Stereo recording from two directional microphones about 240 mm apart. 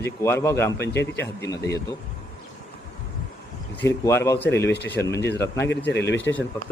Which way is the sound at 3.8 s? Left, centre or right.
Centre.